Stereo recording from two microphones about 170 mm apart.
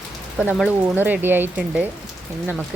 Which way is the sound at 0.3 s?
10° right (ahead or behind).